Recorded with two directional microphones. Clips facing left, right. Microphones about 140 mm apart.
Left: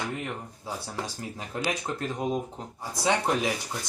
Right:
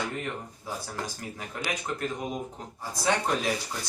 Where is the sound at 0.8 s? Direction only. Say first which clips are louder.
Left 1 dB; 25° left (ahead or behind).